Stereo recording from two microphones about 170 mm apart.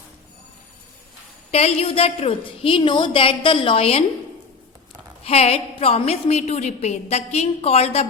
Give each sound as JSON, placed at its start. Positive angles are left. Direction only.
{"t": 1.5, "sound": "a woman's voice", "side_deg": 35}
{"t": 5.2, "sound": "a woman's voice", "side_deg": 35}